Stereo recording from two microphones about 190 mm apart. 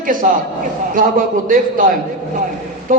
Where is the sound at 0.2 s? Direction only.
40° right (ahead or behind).